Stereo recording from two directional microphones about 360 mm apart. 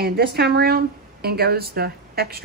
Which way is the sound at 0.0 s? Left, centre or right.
Right.